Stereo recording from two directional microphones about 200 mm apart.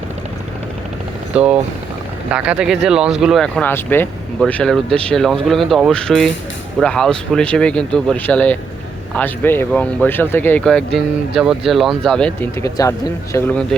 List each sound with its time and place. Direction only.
1.3 s speech: 5° right (ahead or behind)
12.6 s speech: 15° left (ahead or behind)
13.3 s speech: 5° left (ahead or behind)